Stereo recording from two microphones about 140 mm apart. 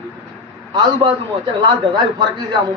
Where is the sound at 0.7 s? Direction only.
30° right (ahead or behind).